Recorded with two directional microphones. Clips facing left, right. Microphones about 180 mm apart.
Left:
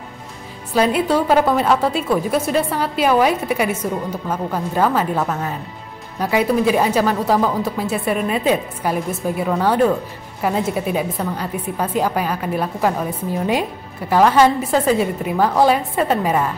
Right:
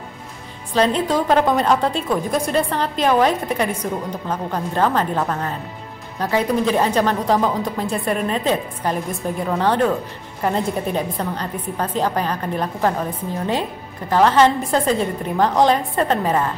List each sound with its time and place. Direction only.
0.7 s a woman's voice: 10° left (ahead or behind)